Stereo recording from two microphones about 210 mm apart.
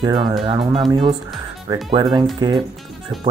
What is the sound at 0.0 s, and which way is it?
Speech, 20° right (ahead or behind).